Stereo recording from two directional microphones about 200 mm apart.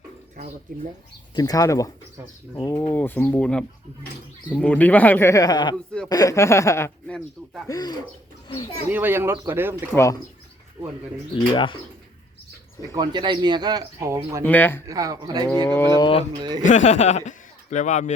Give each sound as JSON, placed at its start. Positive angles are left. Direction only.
{"t": 1.4, "sound": "speech", "side_deg": 15}
{"t": 5.7, "sound": "speech", "side_deg": 5}
{"t": 6.1, "sound": "speech", "side_deg": 15}
{"t": 8.9, "sound": "speech", "side_deg": -10}
{"t": 9.9, "sound": "speech", "side_deg": 15}
{"t": 11.5, "sound": "speech", "side_deg": 25}
{"t": 12.9, "sound": "speech", "side_deg": -20}
{"t": 14.4, "sound": "speech", "side_deg": 10}
{"t": 14.8, "sound": "speech", "side_deg": -15}
{"t": 15.6, "sound": "speech", "side_deg": 10}
{"t": 16.0, "sound": "speech", "side_deg": 25}
{"t": 16.4, "sound": "speech", "side_deg": -20}
{"t": 16.6, "sound": "a man's voice", "side_deg": 35}